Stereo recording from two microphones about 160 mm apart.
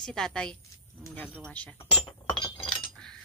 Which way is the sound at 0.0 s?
5° left (ahead or behind).